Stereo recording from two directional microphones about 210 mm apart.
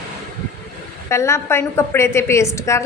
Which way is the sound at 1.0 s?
15° left (ahead or behind).